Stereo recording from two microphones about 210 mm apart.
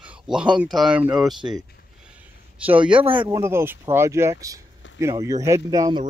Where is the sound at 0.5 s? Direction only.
Centre (ahead or behind).